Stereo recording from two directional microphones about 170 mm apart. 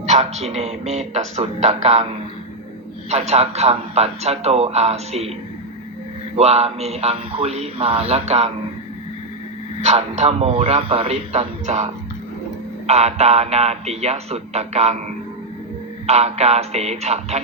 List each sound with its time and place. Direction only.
0.0 s a man's voice: 40° right (ahead or behind)
6.3 s a man's voice: 40° right (ahead or behind)
9.8 s a man's voice: 40° right (ahead or behind)
12.9 s a man's voice: 40° right (ahead or behind)
16.0 s a man's voice: 40° right (ahead or behind)